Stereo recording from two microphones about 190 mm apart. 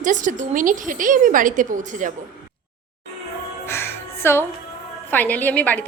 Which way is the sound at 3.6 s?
15° left (ahead or behind).